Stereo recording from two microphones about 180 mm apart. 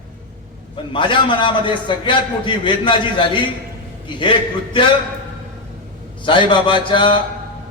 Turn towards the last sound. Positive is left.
turn(degrees=30)  # may be behind; listen again after turning